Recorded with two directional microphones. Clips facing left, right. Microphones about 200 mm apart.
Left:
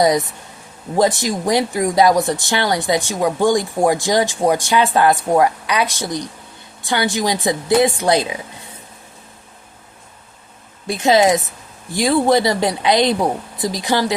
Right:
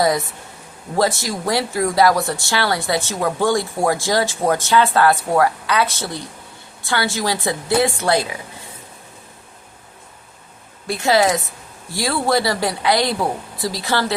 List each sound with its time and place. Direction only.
0.0 s speech: 20° left (ahead or behind)
10.8 s speech: 20° left (ahead or behind)